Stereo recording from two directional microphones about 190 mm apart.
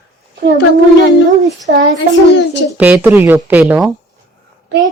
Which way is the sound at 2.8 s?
10° right (ahead or behind).